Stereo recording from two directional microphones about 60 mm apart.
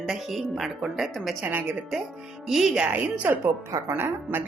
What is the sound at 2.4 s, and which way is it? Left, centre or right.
Speech, centre.